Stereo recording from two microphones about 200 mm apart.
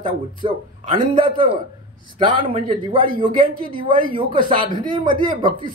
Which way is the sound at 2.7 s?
25° right (ahead or behind).